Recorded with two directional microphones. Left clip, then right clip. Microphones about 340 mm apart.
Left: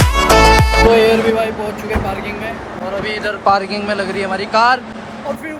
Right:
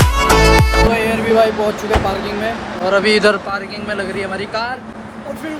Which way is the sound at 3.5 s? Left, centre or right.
Centre.